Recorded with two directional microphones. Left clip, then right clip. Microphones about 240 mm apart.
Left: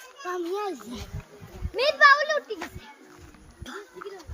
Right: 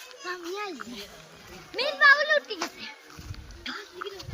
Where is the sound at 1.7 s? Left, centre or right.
Left.